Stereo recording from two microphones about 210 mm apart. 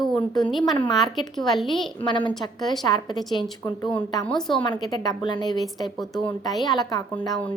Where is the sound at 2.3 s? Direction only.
Centre (ahead or behind).